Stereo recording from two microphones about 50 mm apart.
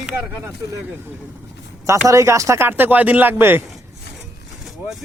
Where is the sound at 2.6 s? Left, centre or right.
Right.